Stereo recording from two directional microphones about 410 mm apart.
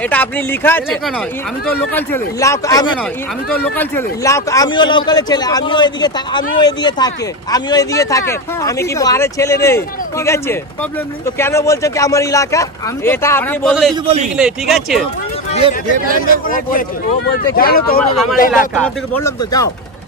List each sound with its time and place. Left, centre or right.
0.1 s speech: centre
2.0 s speech: centre
14.0 s a man's voice: centre
14.3 s speech: centre
15.6 s speech: centre
16.3 s speech: centre
18.8 s speech: centre